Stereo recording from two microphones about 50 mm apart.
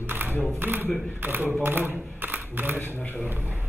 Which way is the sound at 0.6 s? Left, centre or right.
Right.